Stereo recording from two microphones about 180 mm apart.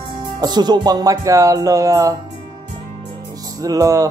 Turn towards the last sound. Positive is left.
turn(degrees=-20)  # may be behind; listen again after turning